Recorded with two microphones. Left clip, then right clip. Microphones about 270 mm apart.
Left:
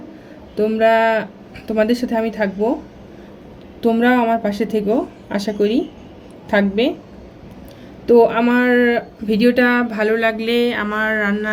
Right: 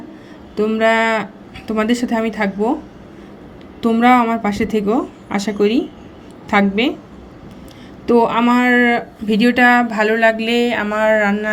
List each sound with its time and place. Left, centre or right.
0.5 s speech: centre
3.9 s speech: centre
8.0 s speech: centre